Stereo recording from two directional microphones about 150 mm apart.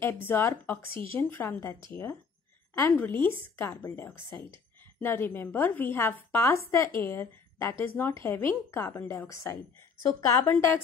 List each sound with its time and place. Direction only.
0.0 s a woman's voice: 15° left (ahead or behind)